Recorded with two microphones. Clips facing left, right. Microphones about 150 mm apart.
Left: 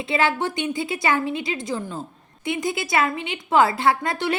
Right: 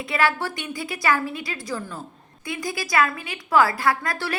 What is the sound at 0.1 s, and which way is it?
A woman's voice, 25° left (ahead or behind).